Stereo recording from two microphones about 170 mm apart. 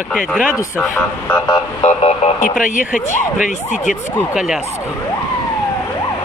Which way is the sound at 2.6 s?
50° left (ahead or behind).